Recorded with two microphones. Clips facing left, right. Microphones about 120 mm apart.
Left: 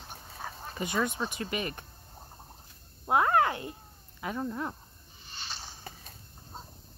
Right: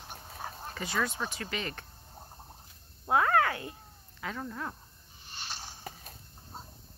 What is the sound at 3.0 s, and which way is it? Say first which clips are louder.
Speech: left 1 dB; 20° left (ahead or behind).